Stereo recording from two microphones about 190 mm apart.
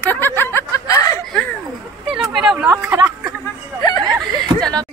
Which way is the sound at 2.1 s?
Centre (ahead or behind).